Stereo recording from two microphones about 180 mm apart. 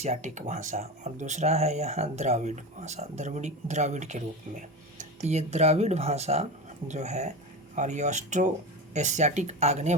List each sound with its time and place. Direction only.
0.0 s speech: 40° right (ahead or behind)